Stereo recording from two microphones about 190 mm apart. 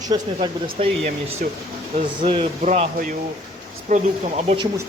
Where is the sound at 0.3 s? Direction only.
30° right (ahead or behind).